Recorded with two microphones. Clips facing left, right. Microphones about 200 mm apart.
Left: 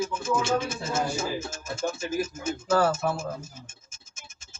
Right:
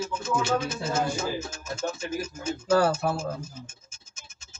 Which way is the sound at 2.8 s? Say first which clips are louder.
Even; 35° right (ahead or behind).